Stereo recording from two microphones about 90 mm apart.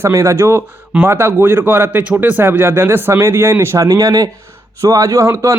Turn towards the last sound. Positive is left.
turn(degrees=-30)  # may be behind; listen again after turning